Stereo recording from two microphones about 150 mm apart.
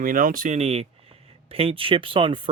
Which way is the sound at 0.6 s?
45° right (ahead or behind).